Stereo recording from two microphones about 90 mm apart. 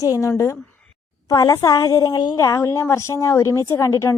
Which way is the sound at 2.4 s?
35° left (ahead or behind).